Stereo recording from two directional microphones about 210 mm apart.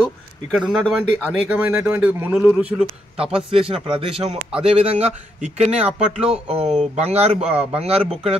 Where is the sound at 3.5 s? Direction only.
25° right (ahead or behind).